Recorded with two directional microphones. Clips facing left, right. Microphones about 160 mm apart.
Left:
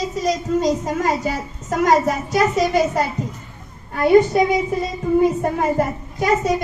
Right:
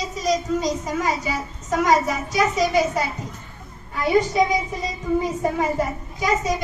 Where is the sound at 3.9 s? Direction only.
55° left (ahead or behind).